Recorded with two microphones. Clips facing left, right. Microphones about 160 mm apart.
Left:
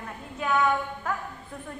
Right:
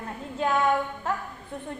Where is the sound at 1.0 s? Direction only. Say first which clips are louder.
Right 1 dB; 25° right (ahead or behind).